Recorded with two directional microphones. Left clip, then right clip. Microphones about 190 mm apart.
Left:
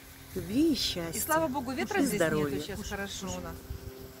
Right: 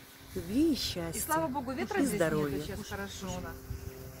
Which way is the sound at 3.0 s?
35° left (ahead or behind).